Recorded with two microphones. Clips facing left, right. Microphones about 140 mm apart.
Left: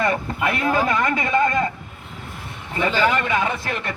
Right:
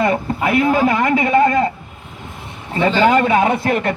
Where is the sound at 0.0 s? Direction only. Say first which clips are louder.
Right 4 dB; 25° right (ahead or behind).